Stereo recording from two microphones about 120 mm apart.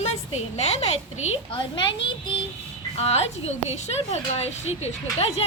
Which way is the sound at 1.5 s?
40° left (ahead or behind).